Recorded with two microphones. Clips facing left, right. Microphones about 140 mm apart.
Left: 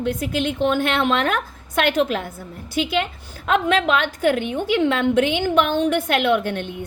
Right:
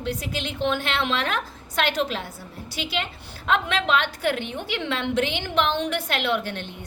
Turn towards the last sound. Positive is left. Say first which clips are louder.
# left 6 dB
turn(degrees=50)  # may be behind; listen again after turning